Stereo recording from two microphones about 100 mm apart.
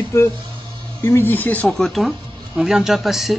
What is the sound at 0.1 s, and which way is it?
Speech, 25° left (ahead or behind).